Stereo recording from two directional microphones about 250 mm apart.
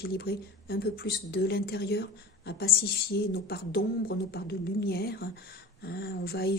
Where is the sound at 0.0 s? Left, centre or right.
Left.